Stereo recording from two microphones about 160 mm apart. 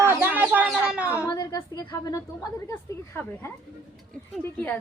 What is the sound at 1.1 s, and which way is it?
A woman's voice, 15° left (ahead or behind).